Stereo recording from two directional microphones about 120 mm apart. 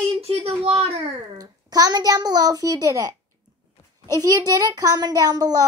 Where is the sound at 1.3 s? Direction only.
30° right (ahead or behind).